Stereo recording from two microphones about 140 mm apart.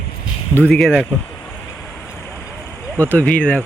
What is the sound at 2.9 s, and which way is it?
Speech, 10° left (ahead or behind).